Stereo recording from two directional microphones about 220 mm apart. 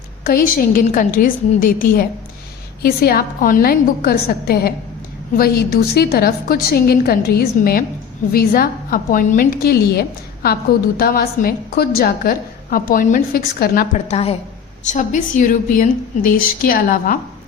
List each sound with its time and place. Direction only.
0.3 s a woman's voice: 40° left (ahead or behind)
14.1 s a woman's voice: 25° left (ahead or behind)